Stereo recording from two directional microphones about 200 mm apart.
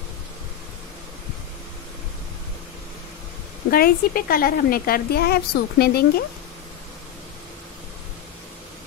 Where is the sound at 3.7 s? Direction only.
50° left (ahead or behind).